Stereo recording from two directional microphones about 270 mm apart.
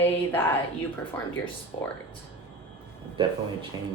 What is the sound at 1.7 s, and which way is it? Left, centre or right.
Speech, centre.